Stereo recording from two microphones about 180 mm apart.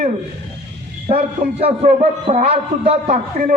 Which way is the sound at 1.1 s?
35° right (ahead or behind).